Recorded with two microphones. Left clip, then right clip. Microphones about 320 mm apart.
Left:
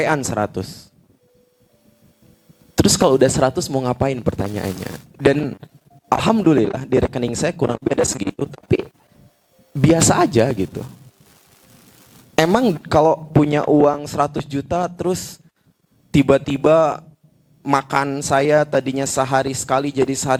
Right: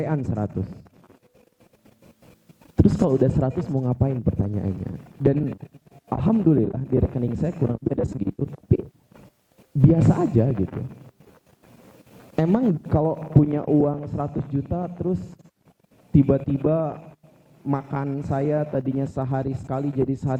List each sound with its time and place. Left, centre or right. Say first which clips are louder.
0.0 s speech: left 9 dB; centre
2.7 s a sound: left 6 dB; centre
3.2 s speech: left 8 dB; centre
12.5 s speech: left 6 dB; centre
13.4 s speech: left 6 dB; centre
14.0 s speech: left 10 dB; centre
16.1 s speech: left 6 dB; centre